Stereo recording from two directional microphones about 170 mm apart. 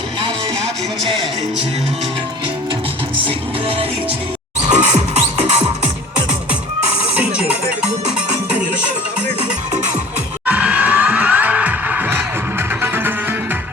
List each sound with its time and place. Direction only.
3.2 s music: 35° right (ahead or behind)
7.2 s music: 5° right (ahead or behind)
10.4 s music: 10° right (ahead or behind)